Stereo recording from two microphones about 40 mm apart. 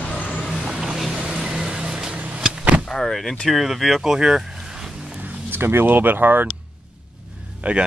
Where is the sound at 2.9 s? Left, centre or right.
Centre.